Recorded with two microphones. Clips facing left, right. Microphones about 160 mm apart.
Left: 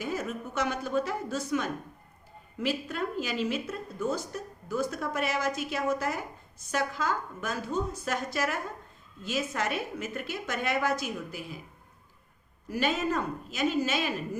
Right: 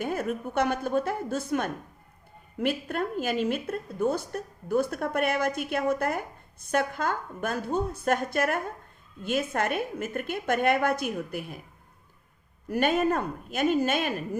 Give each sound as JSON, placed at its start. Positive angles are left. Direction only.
{"t": 0.0, "sound": "a woman's voice", "side_deg": -55}
{"t": 12.6, "sound": "a woman's voice", "side_deg": -55}